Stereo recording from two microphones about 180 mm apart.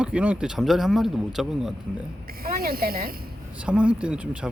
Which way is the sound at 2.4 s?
55° right (ahead or behind).